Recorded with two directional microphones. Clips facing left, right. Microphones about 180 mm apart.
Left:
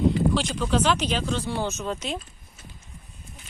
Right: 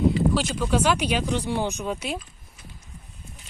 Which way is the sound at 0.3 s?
5° right (ahead or behind).